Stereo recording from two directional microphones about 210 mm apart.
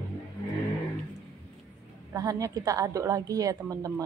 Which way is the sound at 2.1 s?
15° right (ahead or behind).